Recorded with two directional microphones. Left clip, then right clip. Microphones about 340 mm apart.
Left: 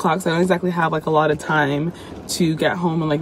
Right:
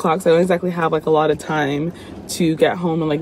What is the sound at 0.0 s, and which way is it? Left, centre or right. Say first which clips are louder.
Speech: right 4 dB; centre.